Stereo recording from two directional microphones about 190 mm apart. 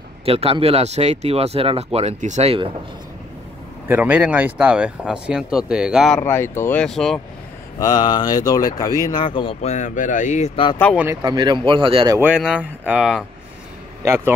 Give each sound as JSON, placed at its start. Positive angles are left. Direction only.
{"t": 0.2, "sound": "speech", "side_deg": -30}
{"t": 3.8, "sound": "a man's voice", "side_deg": -10}
{"t": 6.1, "sound": "speech", "side_deg": 15}
{"t": 7.8, "sound": "speech", "side_deg": 20}
{"t": 11.2, "sound": "speech", "side_deg": -25}
{"t": 12.4, "sound": "speech", "side_deg": -5}
{"t": 14.0, "sound": "a man's voice", "side_deg": -15}